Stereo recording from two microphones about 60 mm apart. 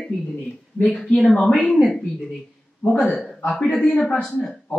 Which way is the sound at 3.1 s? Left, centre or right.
Centre.